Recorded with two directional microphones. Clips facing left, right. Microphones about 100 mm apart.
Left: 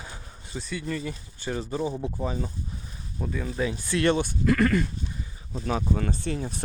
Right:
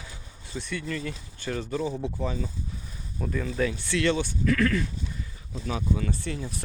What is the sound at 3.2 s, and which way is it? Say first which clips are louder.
Speech: right 1 dB; 10° left (ahead or behind).